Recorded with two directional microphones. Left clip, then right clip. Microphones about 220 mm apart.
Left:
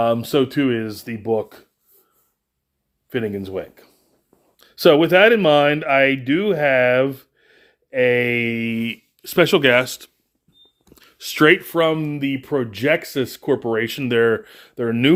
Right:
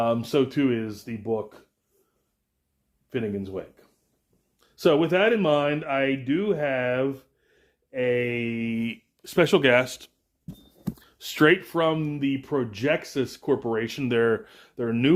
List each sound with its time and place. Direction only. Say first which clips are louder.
0.0 s speech: left 5 dB; 35° left (ahead or behind)
3.1 s speech: left 6 dB; 40° left (ahead or behind)